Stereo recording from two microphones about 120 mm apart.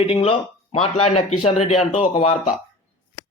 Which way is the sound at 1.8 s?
85° left.